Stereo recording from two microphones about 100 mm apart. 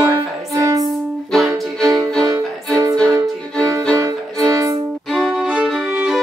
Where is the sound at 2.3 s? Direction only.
30° right (ahead or behind).